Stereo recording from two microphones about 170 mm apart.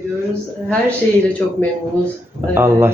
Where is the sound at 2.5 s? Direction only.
15° right (ahead or behind).